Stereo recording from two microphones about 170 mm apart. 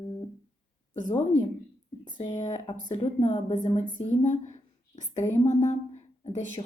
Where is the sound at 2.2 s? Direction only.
45° left (ahead or behind).